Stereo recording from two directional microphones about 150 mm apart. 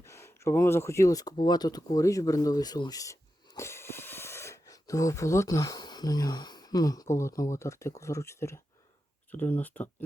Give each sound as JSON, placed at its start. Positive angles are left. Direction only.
{"t": 0.0, "sound": "speech", "side_deg": 20}